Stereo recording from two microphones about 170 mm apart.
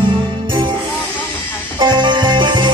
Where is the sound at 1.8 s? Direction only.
25° right (ahead or behind).